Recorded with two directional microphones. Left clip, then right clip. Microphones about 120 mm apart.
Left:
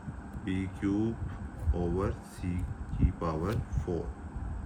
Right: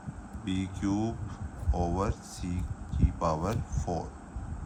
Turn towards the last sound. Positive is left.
turn(degrees=-45)  # may be behind; listen again after turning